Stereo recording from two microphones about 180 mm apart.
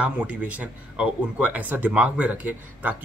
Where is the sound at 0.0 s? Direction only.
5° right (ahead or behind).